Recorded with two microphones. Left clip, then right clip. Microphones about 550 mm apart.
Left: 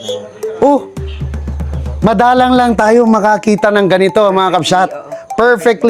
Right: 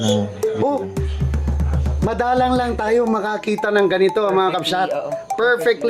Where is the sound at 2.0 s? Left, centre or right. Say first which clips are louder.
Left 9 dB; left.